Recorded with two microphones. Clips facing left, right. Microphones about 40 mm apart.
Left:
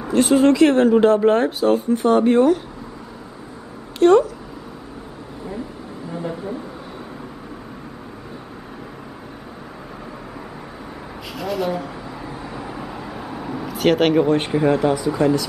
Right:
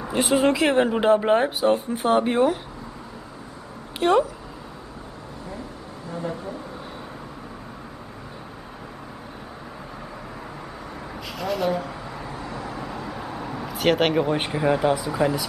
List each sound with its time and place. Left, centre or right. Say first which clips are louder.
0.1 s speech: left 5 dB; centre
4.0 s speech: left 6 dB; centre
11.3 s vehicle: left 1 dB; centre